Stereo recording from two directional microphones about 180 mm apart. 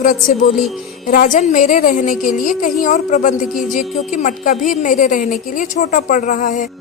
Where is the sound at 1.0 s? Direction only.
50° left (ahead or behind).